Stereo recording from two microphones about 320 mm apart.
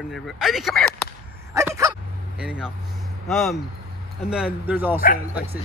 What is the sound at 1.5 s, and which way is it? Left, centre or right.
Bow-wow, centre.